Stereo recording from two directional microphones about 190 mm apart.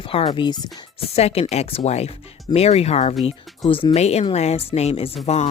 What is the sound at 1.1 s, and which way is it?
Speech, 35° left (ahead or behind).